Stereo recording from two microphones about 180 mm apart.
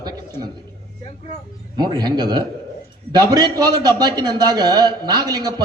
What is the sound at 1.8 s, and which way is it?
A man's voice, 25° right (ahead or behind).